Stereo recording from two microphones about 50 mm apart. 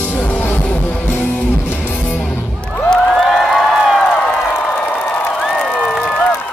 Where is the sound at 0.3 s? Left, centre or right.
Left.